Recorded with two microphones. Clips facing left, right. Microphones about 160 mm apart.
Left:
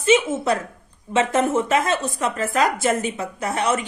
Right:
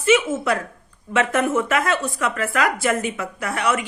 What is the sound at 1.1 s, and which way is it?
A woman's voice, 20° left (ahead or behind).